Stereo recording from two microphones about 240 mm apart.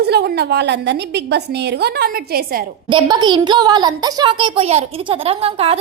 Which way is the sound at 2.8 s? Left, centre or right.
Centre.